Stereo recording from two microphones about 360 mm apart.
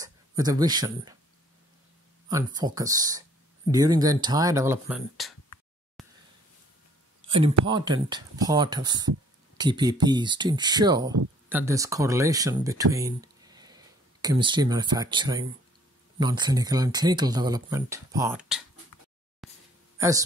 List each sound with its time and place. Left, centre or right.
0.0 s speech: centre
2.2 s speech: centre
7.2 s speech: centre
19.4 s a sound: centre
20.0 s speech: centre